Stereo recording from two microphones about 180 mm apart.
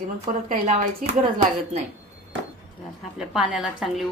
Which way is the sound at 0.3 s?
40° right (ahead or behind).